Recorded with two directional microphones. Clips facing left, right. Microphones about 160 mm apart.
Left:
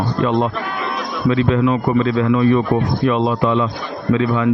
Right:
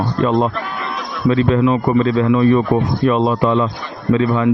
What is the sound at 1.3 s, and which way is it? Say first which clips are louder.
Speech: right 2 dB; 40° right (ahead or behind).